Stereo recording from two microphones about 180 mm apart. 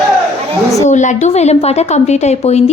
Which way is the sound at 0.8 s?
40° left (ahead or behind).